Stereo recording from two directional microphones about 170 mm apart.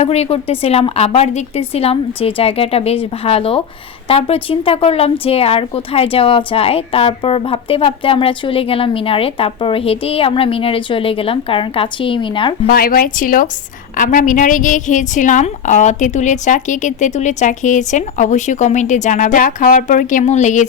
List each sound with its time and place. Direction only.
0.0 s a woman's voice: 40° left (ahead or behind)
12.6 s a woman's voice: 60° left (ahead or behind)